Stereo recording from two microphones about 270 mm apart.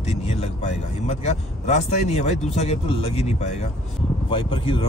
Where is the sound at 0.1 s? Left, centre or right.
Left.